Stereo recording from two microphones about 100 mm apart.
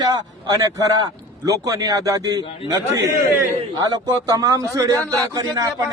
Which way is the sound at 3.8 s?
40° right (ahead or behind).